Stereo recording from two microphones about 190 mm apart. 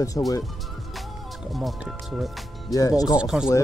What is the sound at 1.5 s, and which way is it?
Speech, centre (ahead or behind).